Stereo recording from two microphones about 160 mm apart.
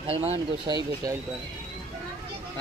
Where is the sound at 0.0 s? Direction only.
40° right (ahead or behind).